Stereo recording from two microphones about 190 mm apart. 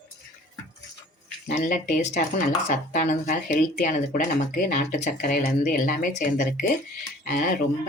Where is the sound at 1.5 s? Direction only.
45° left (ahead or behind).